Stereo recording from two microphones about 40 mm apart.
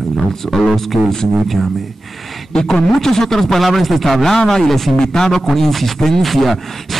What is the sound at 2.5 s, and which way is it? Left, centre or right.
A man's voice, centre.